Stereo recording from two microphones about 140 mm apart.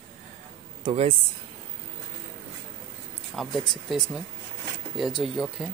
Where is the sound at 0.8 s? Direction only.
45° right (ahead or behind).